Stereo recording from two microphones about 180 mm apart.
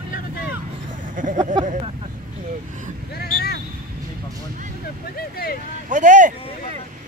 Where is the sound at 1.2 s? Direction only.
45° right (ahead or behind).